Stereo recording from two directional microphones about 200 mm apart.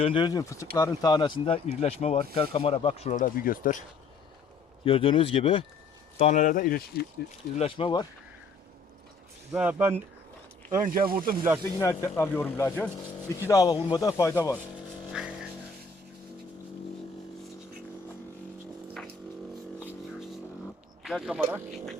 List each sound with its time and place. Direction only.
0.0 s speech: 25° left (ahead or behind); by 3.8 s 40° left (ahead or behind)
4.9 s speech: 25° left (ahead or behind); by 7.1 s 50° left (ahead or behind)
7.5 s speech: 30° left (ahead or behind)
9.5 s speech: 10° right (ahead or behind)
10.8 s speech: 45° right (ahead or behind)
11.8 s speech: 15° left (ahead or behind)
15.2 s vehicle: 5° right (ahead or behind)
21.0 s speech: centre (ahead or behind)